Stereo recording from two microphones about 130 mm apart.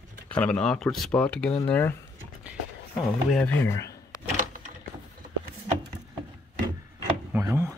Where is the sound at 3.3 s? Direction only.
10° left (ahead or behind).